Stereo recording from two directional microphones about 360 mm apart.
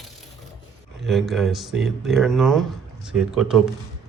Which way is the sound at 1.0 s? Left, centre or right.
Centre.